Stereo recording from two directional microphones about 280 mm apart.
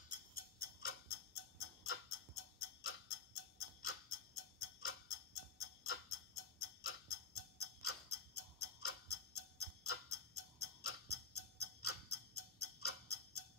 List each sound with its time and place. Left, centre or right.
0.3 s tick-tock: left
1.6 s tick-tock: left